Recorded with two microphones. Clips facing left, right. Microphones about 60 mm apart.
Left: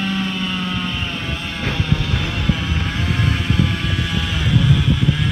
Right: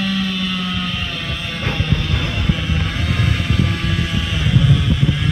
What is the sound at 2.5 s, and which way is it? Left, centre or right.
Vehicle, centre.